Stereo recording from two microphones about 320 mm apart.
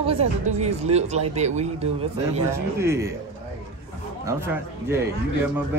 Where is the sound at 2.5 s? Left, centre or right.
Centre.